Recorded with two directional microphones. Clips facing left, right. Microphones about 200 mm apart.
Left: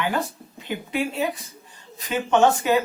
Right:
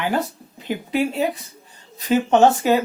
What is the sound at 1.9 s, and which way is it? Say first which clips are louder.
Speech: right 4 dB; 35° right (ahead or behind).